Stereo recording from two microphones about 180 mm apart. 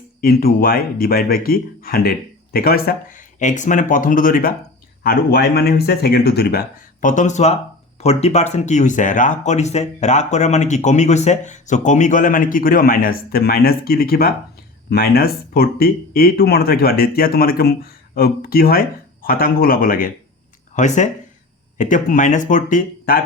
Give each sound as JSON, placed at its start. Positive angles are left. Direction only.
{"t": 0.2, "sound": "speech", "side_deg": 55}
{"t": 7.0, "sound": "speech", "side_deg": 45}
{"t": 20.7, "sound": "speech", "side_deg": 40}